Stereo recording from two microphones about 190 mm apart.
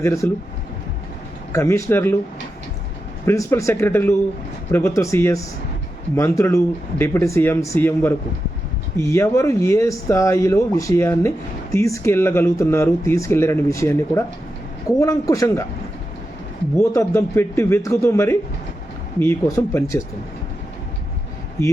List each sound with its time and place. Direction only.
0.0 s speech: 15° left (ahead or behind)
1.5 s speech: 15° left (ahead or behind)
3.2 s speech: 15° left (ahead or behind)
16.7 s speech: 15° left (ahead or behind)